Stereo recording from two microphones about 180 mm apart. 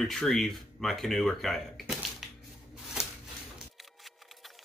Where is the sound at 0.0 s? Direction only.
Centre (ahead or behind).